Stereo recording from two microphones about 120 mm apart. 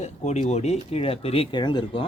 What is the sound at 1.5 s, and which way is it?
Speech, 40° left (ahead or behind).